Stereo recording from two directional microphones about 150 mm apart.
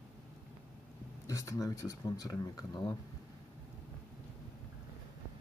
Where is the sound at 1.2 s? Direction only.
20° left (ahead or behind).